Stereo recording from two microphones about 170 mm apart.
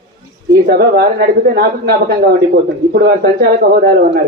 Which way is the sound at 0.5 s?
70° right (ahead or behind).